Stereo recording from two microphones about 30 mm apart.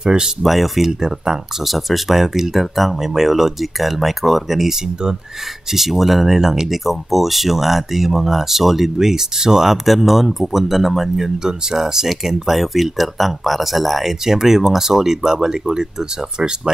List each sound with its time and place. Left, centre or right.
0.0 s speech: right
0.4 s speech: centre
1.0 s speech: right
1.6 s speech: centre
8.9 s speech: centre
9.8 s speech: centre; by 16.7 s right